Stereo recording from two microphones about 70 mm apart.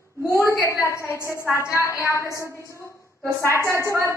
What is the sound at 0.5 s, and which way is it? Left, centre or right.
A woman's voice, left.